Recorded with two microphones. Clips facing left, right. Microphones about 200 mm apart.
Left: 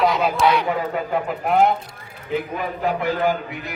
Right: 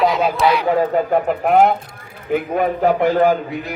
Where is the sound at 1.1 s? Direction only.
50° right (ahead or behind).